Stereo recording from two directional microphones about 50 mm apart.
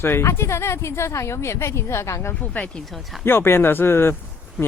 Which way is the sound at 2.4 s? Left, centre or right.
Left.